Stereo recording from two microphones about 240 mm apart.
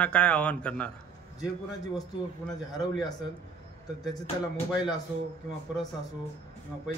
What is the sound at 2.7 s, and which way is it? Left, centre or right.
Speech, centre.